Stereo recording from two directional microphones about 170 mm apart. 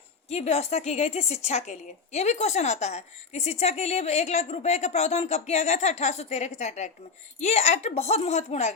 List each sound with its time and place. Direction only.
0.3 s a woman's voice: 40° left (ahead or behind)